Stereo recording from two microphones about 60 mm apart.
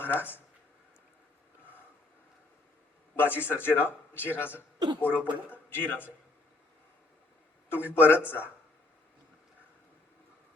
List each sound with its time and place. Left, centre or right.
0.1 s speech: right
3.2 s a woman's voice: left
7.7 s a woman's voice: left